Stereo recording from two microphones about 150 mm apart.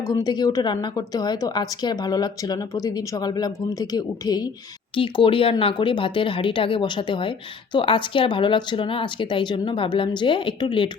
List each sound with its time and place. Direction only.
0.1 s a woman's voice: 25° left (ahead or behind)